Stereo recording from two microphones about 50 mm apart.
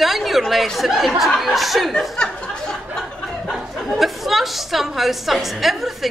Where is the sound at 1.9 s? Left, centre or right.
Centre.